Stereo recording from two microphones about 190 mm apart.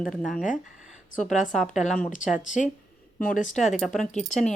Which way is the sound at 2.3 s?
40° left (ahead or behind).